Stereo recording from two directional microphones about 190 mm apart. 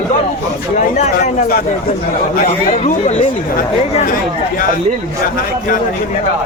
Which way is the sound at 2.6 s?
35° left (ahead or behind).